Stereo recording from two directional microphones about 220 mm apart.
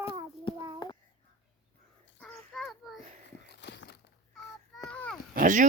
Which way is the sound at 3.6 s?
50° left (ahead or behind).